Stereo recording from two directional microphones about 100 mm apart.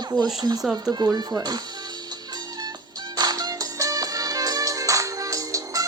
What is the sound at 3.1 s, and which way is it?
Music, 40° right (ahead or behind).